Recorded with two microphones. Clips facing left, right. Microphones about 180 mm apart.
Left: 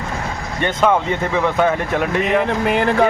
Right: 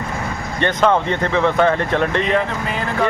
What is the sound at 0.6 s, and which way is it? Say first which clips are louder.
Speech: even; 10° left (ahead or behind).